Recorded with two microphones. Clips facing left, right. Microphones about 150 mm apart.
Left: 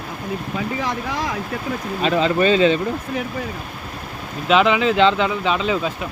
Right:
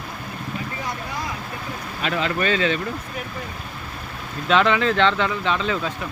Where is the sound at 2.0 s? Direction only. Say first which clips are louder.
Left 6 dB; 25° left (ahead or behind).